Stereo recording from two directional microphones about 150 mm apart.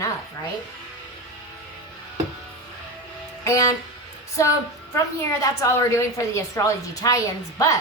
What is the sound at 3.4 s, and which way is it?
Music, 20° left (ahead or behind).